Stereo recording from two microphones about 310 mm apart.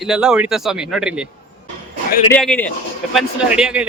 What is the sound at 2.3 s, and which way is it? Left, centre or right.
A man's voice, centre.